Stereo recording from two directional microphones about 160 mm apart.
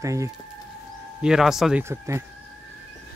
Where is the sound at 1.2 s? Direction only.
5° right (ahead or behind).